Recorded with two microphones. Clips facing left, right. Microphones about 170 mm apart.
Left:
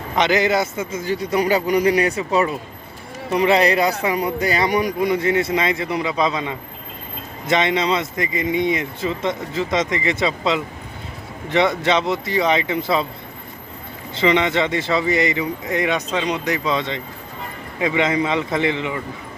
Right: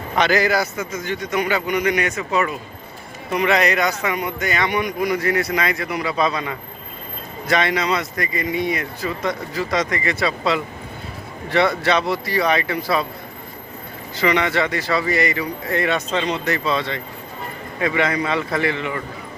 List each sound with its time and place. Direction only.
0.2 s a man's voice: 20° left (ahead or behind)
14.2 s speech: 20° left (ahead or behind)